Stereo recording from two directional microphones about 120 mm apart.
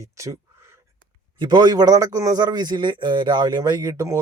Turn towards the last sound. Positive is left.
turn(degrees=-30)  # may be behind; listen again after turning